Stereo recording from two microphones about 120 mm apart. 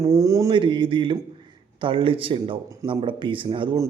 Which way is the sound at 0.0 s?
25° right (ahead or behind).